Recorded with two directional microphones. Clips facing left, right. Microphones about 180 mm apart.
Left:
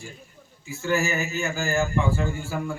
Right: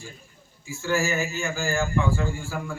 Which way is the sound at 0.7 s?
20° left (ahead or behind).